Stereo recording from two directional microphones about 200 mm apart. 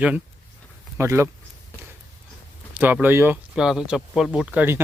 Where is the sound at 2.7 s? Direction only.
10° right (ahead or behind).